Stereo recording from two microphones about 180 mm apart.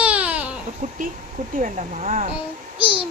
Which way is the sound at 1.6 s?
40° right (ahead or behind).